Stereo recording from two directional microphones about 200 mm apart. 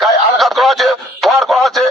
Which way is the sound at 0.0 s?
Centre (ahead or behind).